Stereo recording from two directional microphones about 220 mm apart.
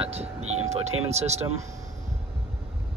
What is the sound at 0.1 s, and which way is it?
Vehicle, 30° right (ahead or behind).